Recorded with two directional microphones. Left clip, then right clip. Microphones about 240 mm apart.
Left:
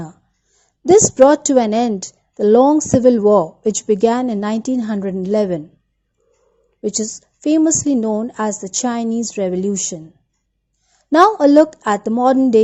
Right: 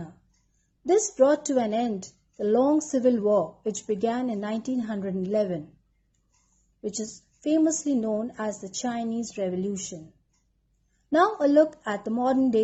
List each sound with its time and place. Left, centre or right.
0.9 s a woman's voice: left
6.8 s a woman's voice: left
11.1 s a woman's voice: left